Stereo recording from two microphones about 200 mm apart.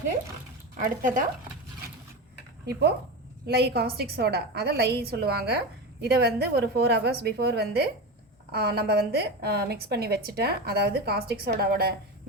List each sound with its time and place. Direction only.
0.8 s speech: 40° right (ahead or behind)
3.4 s a woman's voice: 55° right (ahead or behind)